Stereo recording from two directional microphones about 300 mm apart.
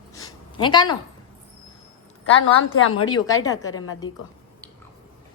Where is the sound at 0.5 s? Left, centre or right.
Centre.